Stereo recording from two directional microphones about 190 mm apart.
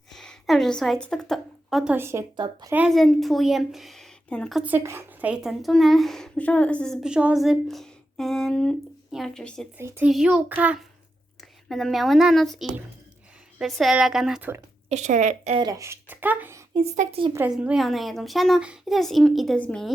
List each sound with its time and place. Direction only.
0.1 s a woman's voice: centre (ahead or behind); by 2.7 s 20° right (ahead or behind)
2.7 s a woman's voice: centre (ahead or behind)
9.7 s a child's voice: 10° right (ahead or behind)
14.8 s a woman's voice: 40° right (ahead or behind)
15.6 s speech: 15° right (ahead or behind)
16.7 s a woman's voice: 35° right (ahead or behind)
17.3 s a woman's voice: 5° right (ahead or behind)